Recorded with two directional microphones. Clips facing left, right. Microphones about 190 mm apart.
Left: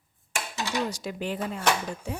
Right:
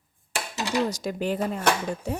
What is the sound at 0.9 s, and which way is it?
Speech, 40° right (ahead or behind).